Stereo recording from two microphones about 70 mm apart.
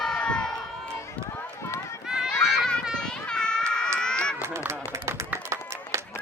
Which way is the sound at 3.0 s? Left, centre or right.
Centre.